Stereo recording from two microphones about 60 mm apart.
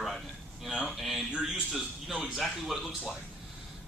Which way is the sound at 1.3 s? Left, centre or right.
Centre.